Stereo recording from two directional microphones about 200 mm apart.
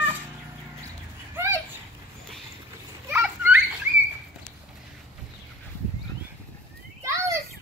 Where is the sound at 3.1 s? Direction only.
10° right (ahead or behind).